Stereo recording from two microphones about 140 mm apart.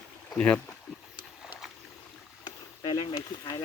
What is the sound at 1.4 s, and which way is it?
Boat, 5° right (ahead or behind).